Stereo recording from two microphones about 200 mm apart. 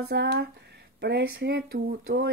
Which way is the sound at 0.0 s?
55° right (ahead or behind).